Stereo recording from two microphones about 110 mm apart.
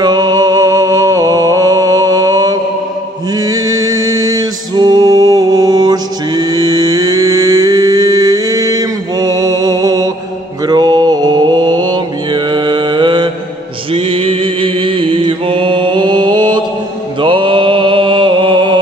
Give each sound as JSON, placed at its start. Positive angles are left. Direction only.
{"t": 0.0, "sound": "music", "side_deg": -35}
{"t": 10.7, "sound": "mantra", "side_deg": -40}
{"t": 13.9, "sound": "mantra", "side_deg": -60}